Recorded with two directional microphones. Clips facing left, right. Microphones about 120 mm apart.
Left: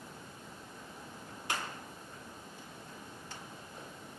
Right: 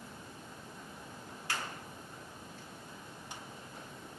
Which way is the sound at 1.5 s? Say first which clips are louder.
Left 2 dB; 20° left (ahead or behind).